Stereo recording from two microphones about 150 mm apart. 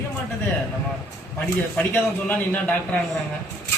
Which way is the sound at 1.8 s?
10° left (ahead or behind).